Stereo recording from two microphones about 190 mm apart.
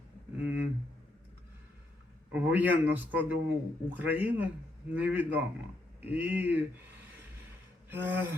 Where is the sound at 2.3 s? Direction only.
10° right (ahead or behind).